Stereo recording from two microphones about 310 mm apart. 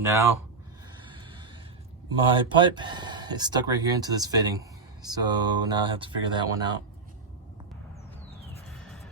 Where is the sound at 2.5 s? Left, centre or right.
Centre.